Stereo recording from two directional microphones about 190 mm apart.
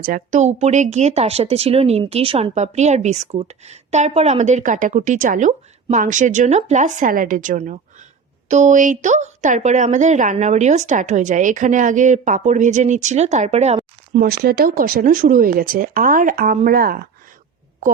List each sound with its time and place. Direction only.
0.0 s speech: 45° right (ahead or behind)
14.3 s speech: 55° right (ahead or behind)